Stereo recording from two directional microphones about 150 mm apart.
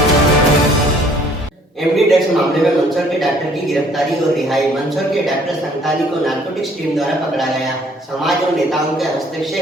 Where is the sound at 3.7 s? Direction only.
Centre (ahead or behind).